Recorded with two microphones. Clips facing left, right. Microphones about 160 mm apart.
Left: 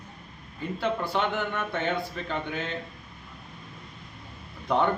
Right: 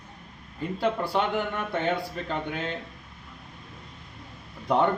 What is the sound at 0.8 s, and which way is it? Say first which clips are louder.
Speech: right 2 dB; 35° right (ahead or behind).